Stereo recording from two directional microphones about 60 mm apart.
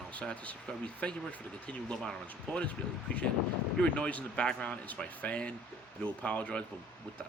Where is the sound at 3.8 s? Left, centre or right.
Left.